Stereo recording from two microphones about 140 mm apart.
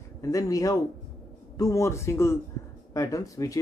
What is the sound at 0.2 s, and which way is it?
Speech, 25° left (ahead or behind).